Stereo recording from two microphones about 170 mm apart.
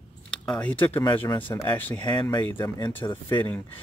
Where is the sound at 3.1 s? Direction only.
25° left (ahead or behind).